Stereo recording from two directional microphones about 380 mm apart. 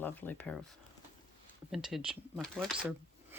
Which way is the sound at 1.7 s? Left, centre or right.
Centre.